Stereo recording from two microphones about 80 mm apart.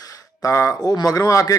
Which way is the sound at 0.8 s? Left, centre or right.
Left.